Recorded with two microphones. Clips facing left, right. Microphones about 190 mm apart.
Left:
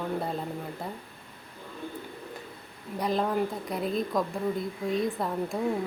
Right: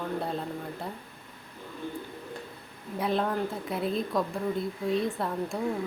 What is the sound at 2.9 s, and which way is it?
Speech, centre (ahead or behind).